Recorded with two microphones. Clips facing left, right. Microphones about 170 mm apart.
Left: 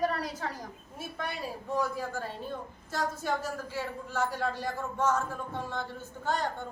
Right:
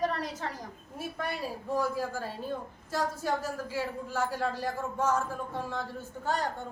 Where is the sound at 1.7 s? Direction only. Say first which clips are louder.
Right 1 dB; 10° right (ahead or behind).